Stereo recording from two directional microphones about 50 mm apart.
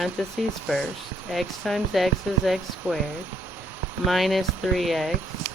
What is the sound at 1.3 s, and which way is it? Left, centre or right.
Speech, centre.